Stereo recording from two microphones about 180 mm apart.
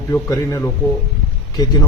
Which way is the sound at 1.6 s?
20° left (ahead or behind).